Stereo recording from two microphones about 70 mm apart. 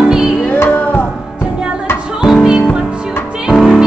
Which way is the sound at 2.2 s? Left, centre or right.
Centre.